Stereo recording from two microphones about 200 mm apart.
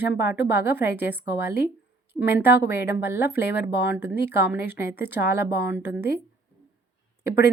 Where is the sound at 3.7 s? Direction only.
60° left (ahead or behind).